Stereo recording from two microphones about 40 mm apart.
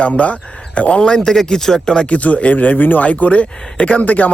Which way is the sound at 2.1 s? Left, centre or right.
Left.